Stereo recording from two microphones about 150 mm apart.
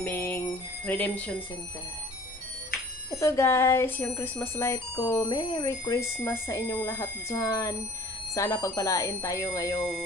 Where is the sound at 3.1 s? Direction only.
20° left (ahead or behind).